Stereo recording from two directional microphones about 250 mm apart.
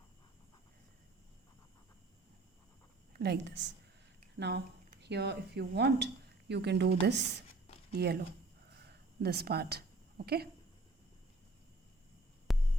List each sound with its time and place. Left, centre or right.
3.1 s a woman's voice: right
12.5 s hum: centre